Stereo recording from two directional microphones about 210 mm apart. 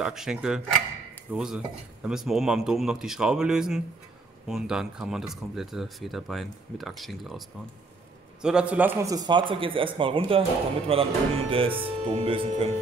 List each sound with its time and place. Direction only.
0.0 s a man's voice: centre (ahead or behind); by 12.7 s 25° right (ahead or behind)